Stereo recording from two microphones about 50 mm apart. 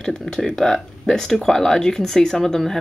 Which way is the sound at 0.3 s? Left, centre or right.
Centre.